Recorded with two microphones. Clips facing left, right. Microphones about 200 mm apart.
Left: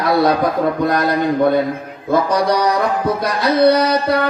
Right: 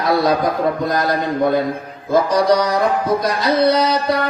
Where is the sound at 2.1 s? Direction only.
60° left (ahead or behind).